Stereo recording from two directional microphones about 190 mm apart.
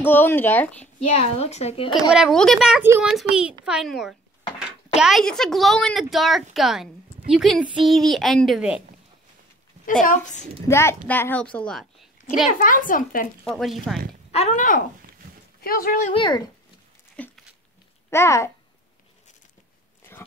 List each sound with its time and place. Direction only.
0.0 s a woman's voice: 10° left (ahead or behind)
0.9 s speech: 30° left (ahead or behind)
2.1 s a woman's voice: centre (ahead or behind)
10.0 s speech: 40° left (ahead or behind)
10.7 s a woman's voice: 15° left (ahead or behind)
12.5 s speech: 45° left (ahead or behind)
13.4 s a woman's voice: centre (ahead or behind)
14.3 s speech: 35° left (ahead or behind)
16.1 s speech: 25° left (ahead or behind)
17.2 s dog: 5° left (ahead or behind)
18.1 s a woman's voice: 15° left (ahead or behind)
20.0 s biting: 10° left (ahead or behind)